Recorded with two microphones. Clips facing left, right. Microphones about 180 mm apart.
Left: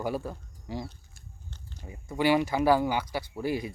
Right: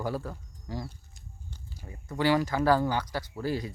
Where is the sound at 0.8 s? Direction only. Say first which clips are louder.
Even; 10° right (ahead or behind).